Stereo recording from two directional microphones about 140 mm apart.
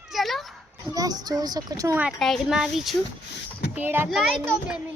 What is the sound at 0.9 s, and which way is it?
Speech, 30° right (ahead or behind).